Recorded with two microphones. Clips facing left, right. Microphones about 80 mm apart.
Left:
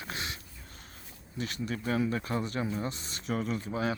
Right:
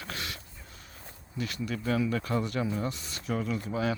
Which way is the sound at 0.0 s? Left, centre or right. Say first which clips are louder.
Even; left.